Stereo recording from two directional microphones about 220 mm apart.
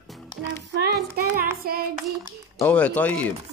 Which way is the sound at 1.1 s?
40° right (ahead or behind).